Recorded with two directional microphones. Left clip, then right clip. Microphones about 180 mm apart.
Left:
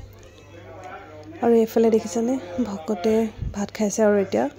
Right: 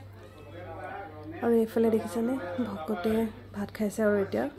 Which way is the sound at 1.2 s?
40° left (ahead or behind).